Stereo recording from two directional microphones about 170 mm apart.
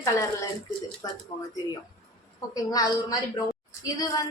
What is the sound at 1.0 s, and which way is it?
Speech, 20° left (ahead or behind).